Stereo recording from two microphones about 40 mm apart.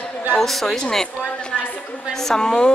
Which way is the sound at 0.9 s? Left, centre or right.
Centre.